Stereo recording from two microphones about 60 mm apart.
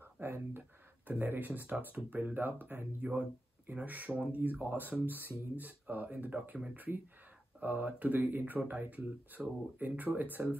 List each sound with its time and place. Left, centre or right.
0.0 s speech: right
4.1 s speech: centre
4.4 s speech: right